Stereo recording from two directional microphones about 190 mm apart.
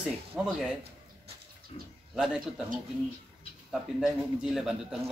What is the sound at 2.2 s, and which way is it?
Speech, 5° right (ahead or behind).